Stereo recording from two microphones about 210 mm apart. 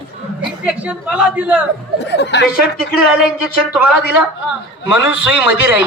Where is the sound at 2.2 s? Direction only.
55° left (ahead or behind).